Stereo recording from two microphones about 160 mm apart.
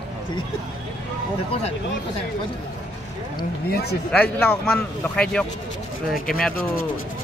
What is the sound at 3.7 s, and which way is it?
Speech, 90° left.